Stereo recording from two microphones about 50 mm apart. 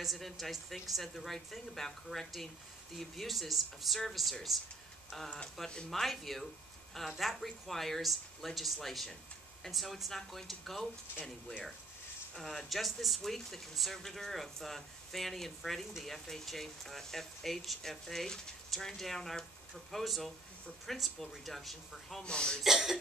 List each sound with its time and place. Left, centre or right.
0.0 s speech: centre
5.9 s speech: centre
12.4 s speech: centre
22.2 s speech: centre
22.6 s speech: centre